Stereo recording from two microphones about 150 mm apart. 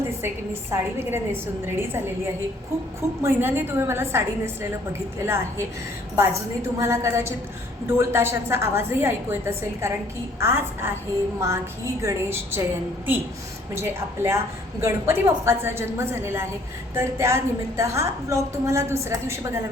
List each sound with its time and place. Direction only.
0.7 s a woman's voice: 15° right (ahead or behind)
3.2 s a woman's voice: 15° right (ahead or behind)
13.7 s a woman's voice: 15° right (ahead or behind)